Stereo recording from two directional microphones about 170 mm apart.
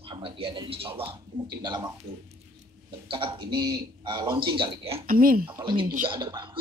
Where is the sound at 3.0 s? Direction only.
30° right (ahead or behind).